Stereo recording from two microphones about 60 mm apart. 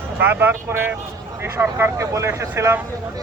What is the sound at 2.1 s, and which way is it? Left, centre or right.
Speech, right.